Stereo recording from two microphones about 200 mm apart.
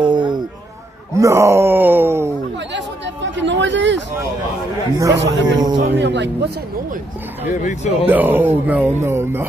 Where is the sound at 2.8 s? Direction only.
65° right (ahead or behind).